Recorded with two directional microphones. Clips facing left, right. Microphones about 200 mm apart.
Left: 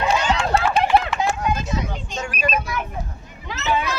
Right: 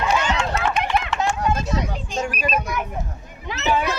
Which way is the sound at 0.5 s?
30° left (ahead or behind).